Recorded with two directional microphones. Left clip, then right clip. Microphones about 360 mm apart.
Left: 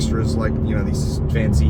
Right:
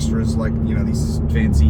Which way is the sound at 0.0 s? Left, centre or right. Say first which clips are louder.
Left 1 dB; centre.